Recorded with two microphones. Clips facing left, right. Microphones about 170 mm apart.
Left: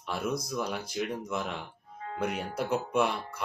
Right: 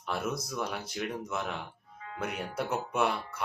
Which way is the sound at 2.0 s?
40° left (ahead or behind).